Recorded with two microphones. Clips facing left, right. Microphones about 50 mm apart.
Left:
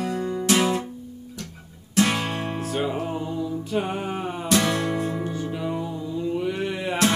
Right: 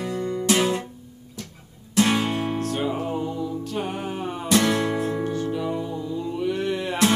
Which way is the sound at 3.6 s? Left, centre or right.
Centre.